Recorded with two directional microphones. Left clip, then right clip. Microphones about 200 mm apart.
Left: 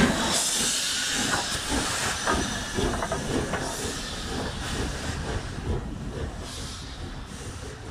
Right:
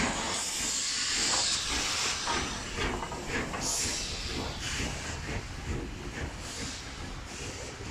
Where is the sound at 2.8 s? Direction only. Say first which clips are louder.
Left 4 dB; 35° left (ahead or behind).